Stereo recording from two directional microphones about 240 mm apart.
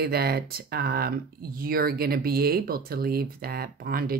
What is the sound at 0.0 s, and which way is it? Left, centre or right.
Speech, right.